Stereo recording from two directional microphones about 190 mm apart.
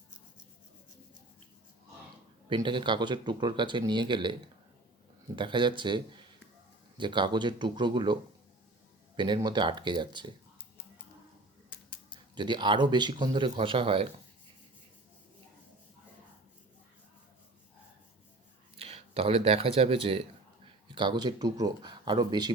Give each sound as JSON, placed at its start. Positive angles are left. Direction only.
{"t": 2.5, "sound": "speech", "side_deg": -25}
{"t": 5.4, "sound": "speech", "side_deg": -25}
{"t": 12.3, "sound": "speech", "side_deg": -25}
{"t": 18.8, "sound": "speech", "side_deg": -30}